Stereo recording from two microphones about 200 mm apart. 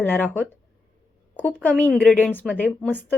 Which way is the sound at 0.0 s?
10° left (ahead or behind).